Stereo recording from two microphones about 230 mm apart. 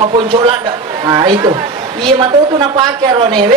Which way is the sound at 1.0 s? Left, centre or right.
Centre.